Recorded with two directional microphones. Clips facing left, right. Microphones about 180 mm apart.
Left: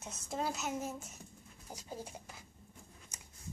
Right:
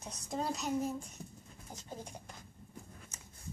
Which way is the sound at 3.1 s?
15° left (ahead or behind).